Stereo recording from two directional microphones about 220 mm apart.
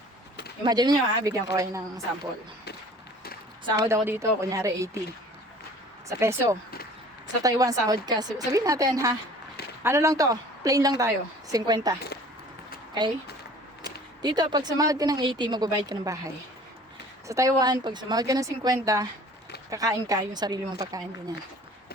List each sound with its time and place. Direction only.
0.6 s speech: 20° right (ahead or behind)
3.8 s speech: 10° right (ahead or behind)
6.1 s speech: 15° right (ahead or behind)
14.2 s speech: 20° right (ahead or behind)